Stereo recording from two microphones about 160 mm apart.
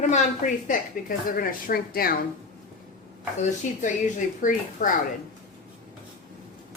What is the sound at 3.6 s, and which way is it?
A woman's voice, 50° left (ahead or behind).